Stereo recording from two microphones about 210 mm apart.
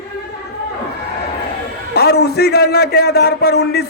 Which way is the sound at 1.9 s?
50° left (ahead or behind).